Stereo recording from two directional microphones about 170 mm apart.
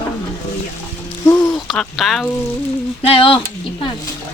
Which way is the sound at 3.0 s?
35° left (ahead or behind).